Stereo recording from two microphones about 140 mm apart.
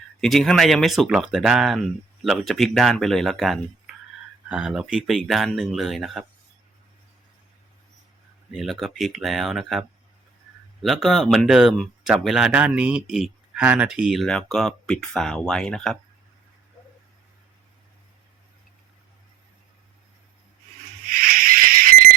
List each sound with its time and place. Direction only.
0.2 s speech: centre (ahead or behind)
8.5 s speech: centre (ahead or behind)
21.1 s a sound: 90° right